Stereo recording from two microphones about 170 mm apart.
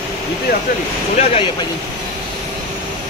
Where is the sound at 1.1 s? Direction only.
40° left (ahead or behind).